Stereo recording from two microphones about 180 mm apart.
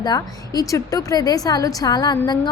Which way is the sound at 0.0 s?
20° left (ahead or behind).